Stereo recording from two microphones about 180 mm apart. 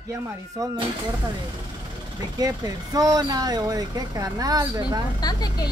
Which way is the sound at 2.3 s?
20° right (ahead or behind).